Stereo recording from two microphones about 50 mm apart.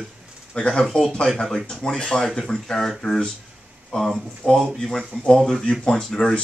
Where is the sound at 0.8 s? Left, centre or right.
Centre.